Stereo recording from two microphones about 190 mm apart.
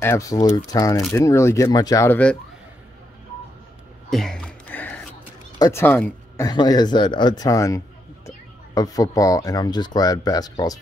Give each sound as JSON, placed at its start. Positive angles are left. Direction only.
{"t": 0.0, "sound": "speech", "side_deg": 15}
{"t": 4.1, "sound": "a sound", "side_deg": 5}
{"t": 5.6, "sound": "speech", "side_deg": 15}